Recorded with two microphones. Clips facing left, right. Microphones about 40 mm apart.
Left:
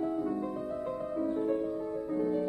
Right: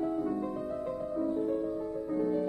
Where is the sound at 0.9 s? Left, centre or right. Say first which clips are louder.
Even; left.